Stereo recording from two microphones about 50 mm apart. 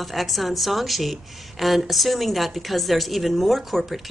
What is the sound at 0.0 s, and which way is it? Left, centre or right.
A woman's voice, centre.